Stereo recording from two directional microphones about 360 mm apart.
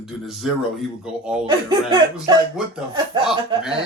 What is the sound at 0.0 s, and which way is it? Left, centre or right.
Speech, centre.